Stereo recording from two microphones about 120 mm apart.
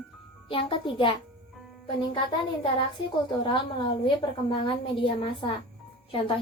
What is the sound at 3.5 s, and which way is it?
A woman's voice, 45° left (ahead or behind).